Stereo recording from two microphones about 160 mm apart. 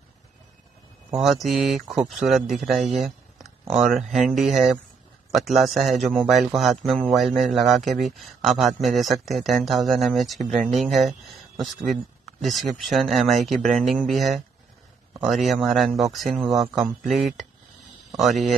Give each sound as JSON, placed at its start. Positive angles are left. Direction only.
{"t": 1.1, "sound": "a man's voice", "side_deg": 0}